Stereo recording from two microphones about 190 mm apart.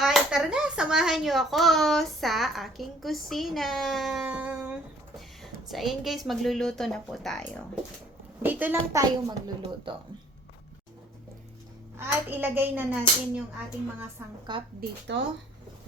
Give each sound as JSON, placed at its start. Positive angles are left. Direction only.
{"t": 0.0, "sound": "speech", "side_deg": 0}
{"t": 8.4, "sound": "a child's voice", "side_deg": -10}
{"t": 11.9, "sound": "a child's voice", "side_deg": -10}
{"t": 14.8, "sound": "speech", "side_deg": -65}